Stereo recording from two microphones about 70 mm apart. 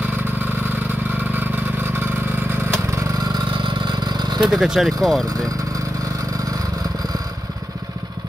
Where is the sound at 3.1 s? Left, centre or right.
Right.